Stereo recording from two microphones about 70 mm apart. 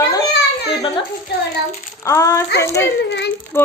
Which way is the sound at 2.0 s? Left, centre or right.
Left.